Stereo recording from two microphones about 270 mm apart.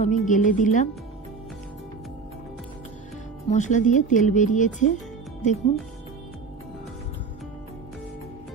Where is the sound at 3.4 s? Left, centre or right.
Left.